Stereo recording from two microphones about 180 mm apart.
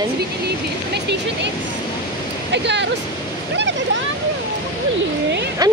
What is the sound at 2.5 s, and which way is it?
Speech, 75° right (ahead or behind).